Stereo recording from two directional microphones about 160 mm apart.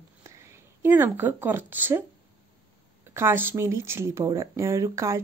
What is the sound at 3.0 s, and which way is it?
Speech, 15° right (ahead or behind).